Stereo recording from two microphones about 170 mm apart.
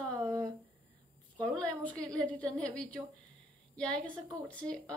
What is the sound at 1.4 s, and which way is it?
A woman's voice, 5° left (ahead or behind).